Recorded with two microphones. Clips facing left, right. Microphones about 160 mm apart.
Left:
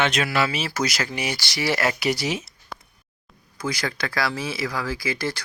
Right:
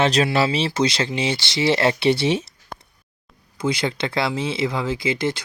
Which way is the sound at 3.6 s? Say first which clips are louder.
Right 5 dB; 25° right (ahead or behind).